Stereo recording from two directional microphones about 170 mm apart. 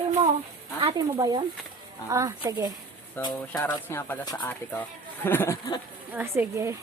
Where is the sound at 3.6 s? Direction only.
10° left (ahead or behind).